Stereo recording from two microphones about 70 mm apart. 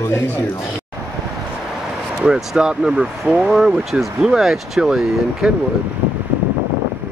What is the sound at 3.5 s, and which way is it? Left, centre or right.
Speech, centre.